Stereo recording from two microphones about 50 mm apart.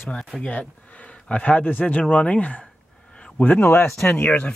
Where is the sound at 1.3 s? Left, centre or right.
Left.